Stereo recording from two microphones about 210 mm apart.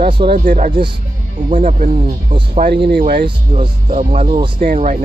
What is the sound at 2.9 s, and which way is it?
Speech, 50° right (ahead or behind).